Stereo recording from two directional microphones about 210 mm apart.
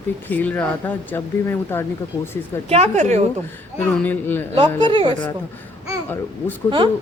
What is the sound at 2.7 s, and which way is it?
Speech, 30° right (ahead or behind).